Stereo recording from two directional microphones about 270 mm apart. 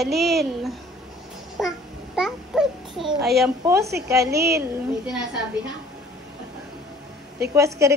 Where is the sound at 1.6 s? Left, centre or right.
Centre.